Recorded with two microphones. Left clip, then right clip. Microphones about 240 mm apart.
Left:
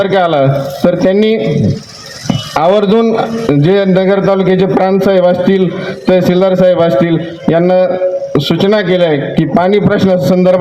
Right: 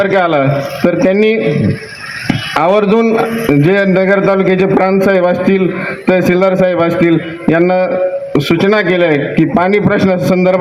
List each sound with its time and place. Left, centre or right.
0.0 s a man's voice: left
2.6 s speech: left
3.0 s a man's voice: left